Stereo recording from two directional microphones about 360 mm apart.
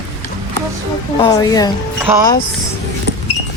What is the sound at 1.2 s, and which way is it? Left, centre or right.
Speech, centre.